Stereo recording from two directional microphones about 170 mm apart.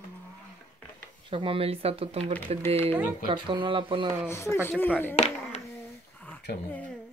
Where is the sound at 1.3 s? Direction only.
30° right (ahead or behind).